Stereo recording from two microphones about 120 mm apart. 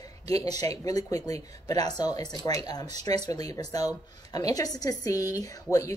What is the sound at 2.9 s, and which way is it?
Speech, 70° right (ahead or behind).